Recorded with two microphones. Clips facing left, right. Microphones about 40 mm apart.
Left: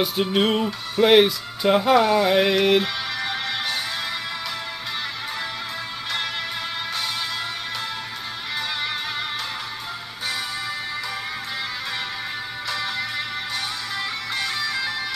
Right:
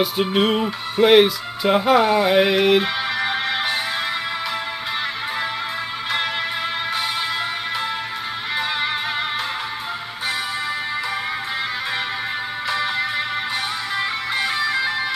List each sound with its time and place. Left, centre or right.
0.0 s speech: centre
0.7 s music: centre
1.1 s speech: centre
2.8 s music: centre
12.6 s music: centre